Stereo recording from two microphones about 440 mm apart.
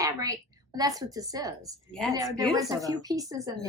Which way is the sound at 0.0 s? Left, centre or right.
Centre.